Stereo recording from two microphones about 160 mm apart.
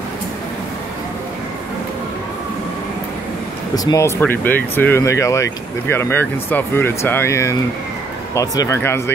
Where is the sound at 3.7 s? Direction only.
20° left (ahead or behind).